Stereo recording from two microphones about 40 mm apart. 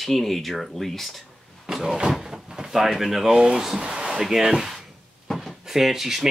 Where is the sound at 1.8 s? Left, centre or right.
Centre.